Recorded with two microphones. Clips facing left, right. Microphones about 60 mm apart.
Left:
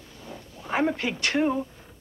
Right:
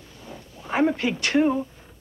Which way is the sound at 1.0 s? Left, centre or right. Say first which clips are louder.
Right 4 dB; right.